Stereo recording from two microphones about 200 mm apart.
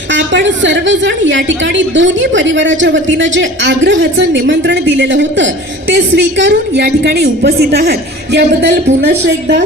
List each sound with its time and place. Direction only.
0.1 s a woman's voice: 65° right (ahead or behind)